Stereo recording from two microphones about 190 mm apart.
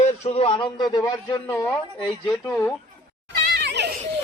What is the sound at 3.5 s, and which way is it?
Children playing, 65° right (ahead or behind).